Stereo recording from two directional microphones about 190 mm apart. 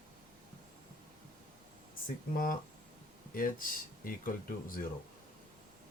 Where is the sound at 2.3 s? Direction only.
45° left (ahead or behind).